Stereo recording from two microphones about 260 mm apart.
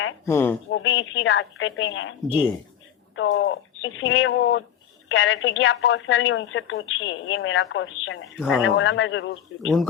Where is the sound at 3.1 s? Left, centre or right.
Left.